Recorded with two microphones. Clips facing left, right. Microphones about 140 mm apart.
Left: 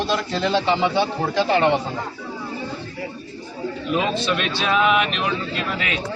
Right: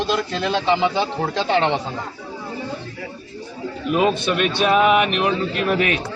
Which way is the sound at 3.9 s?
50° right (ahead or behind).